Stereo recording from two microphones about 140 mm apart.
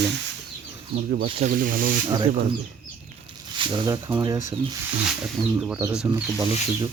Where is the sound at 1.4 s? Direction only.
85° right.